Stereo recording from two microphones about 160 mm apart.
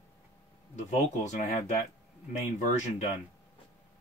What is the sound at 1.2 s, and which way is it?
Speech, 45° left (ahead or behind).